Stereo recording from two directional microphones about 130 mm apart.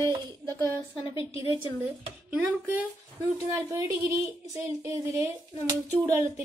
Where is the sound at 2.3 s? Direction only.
15° right (ahead or behind).